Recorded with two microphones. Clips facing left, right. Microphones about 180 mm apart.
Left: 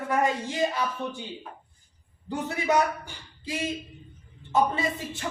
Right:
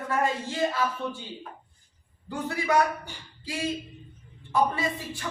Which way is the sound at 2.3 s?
20° left (ahead or behind).